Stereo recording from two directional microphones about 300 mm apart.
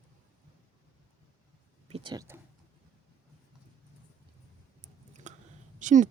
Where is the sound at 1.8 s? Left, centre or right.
Centre.